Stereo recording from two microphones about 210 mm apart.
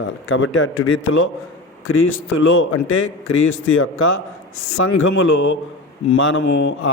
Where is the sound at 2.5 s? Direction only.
70° left (ahead or behind).